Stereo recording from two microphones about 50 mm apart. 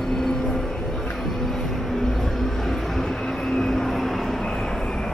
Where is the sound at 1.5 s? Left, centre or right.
Centre.